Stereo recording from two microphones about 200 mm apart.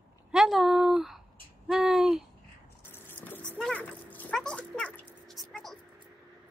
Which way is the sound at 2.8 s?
10° left (ahead or behind).